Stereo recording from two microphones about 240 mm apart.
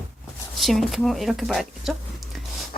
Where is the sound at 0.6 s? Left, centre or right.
Centre.